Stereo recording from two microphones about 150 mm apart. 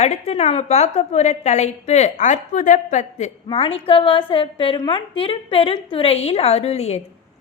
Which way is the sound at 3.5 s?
40° left (ahead or behind).